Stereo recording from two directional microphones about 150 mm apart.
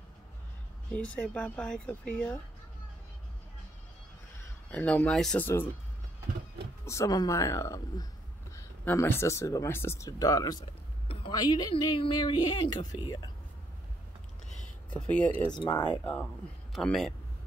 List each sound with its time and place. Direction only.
0.9 s speech: 10° left (ahead or behind)
4.6 s speech: 10° left (ahead or behind)
6.9 s speech: 20° left (ahead or behind)
10.6 s speech: 35° left (ahead or behind)
14.9 s speech: 10° left (ahead or behind)
15.5 s speech: 30° left (ahead or behind)
15.8 s speech: 10° left (ahead or behind)